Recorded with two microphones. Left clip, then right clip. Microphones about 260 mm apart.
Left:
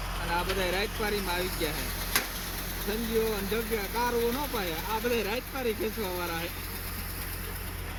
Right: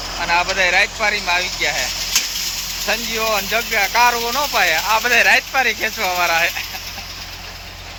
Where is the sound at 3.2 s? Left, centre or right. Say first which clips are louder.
Right 12 dB; centre.